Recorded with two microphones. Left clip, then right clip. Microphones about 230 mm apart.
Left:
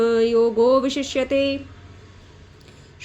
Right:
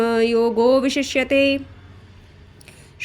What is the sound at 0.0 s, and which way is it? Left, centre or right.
Speech, right.